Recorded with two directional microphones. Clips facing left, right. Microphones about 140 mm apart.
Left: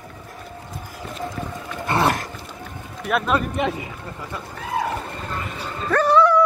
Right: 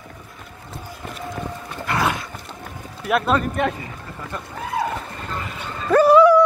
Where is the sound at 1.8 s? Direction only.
30° left (ahead or behind).